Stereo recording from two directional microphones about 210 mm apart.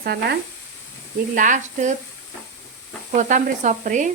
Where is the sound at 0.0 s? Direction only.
50° right (ahead or behind).